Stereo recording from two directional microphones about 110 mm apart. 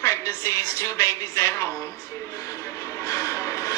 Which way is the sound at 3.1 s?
25° left (ahead or behind).